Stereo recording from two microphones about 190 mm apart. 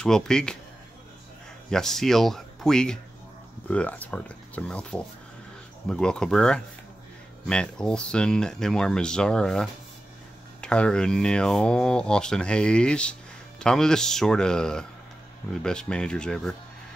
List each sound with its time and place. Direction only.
0.0 s speech: 5° left (ahead or behind)
1.7 s speech: centre (ahead or behind)